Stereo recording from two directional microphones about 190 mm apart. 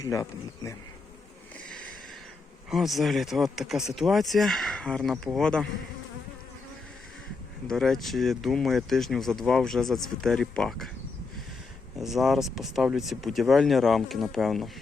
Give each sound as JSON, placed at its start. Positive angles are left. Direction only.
{"t": 0.0, "sound": "speech", "side_deg": 15}
{"t": 2.6, "sound": "speech", "side_deg": 0}
{"t": 7.7, "sound": "speech", "side_deg": 0}
{"t": 11.9, "sound": "speech", "side_deg": 0}